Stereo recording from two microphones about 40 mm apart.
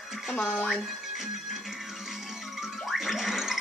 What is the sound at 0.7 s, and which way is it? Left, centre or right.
Music, centre.